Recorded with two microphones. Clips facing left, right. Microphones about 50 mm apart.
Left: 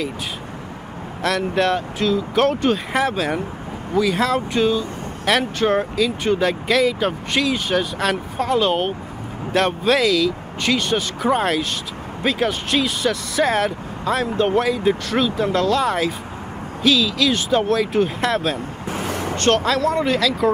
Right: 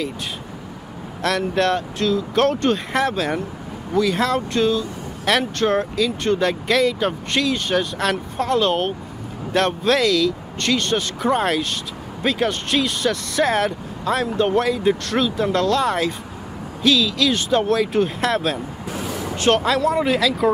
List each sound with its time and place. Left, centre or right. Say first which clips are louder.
1.2 s speech: even; centre
18.9 s a sound: left 3 dB; left
19.3 s speech: right 1 dB; centre